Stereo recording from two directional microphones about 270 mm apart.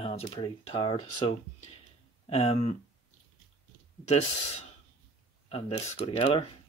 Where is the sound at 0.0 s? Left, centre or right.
Left.